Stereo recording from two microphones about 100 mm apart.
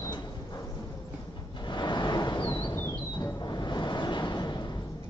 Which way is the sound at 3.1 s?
40° left (ahead or behind).